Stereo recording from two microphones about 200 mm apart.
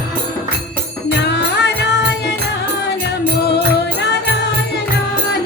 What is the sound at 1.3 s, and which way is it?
Music, 60° left (ahead or behind).